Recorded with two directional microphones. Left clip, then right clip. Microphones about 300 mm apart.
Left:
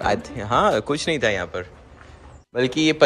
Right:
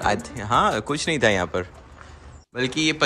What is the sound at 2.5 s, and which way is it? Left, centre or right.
Speech, centre.